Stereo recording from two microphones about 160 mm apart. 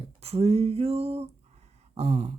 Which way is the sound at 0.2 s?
40° right (ahead or behind).